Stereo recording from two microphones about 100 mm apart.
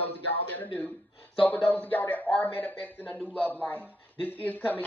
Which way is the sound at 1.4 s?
15° left (ahead or behind).